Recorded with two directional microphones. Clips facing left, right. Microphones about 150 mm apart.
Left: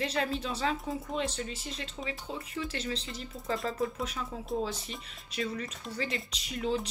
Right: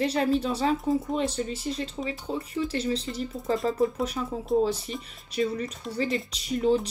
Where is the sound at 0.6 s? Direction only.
45° right (ahead or behind).